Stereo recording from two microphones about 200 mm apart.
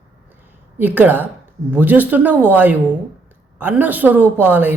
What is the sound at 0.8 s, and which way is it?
A woman's voice, 10° right (ahead or behind).